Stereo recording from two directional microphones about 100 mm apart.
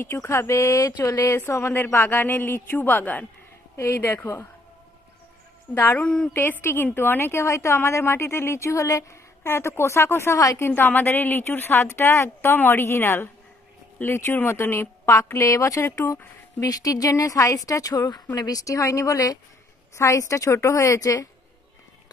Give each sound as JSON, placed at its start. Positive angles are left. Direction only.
{"t": 0.0, "sound": "a woman's voice", "side_deg": 25}
{"t": 3.7, "sound": "a woman's voice", "side_deg": 25}
{"t": 5.8, "sound": "speech", "side_deg": 20}
{"t": 6.3, "sound": "a woman's voice", "side_deg": 20}
{"t": 10.7, "sound": "a woman's voice", "side_deg": 20}